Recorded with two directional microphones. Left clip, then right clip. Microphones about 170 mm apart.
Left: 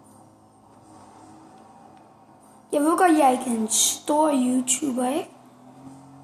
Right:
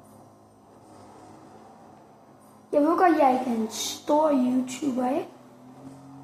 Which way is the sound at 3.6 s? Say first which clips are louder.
Left 5 dB; 65° left (ahead or behind).